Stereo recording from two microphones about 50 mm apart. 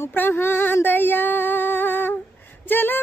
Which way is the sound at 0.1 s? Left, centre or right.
Left.